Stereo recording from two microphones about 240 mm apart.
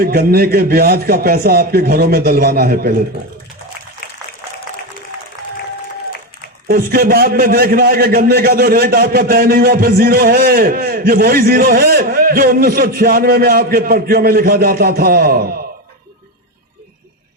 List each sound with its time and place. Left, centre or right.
0.0 s a man's voice: right
6.7 s a man's voice: right